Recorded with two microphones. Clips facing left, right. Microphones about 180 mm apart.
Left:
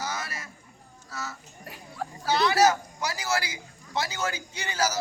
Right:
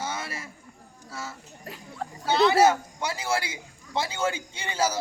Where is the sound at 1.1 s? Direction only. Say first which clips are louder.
Even; 30° right (ahead or behind).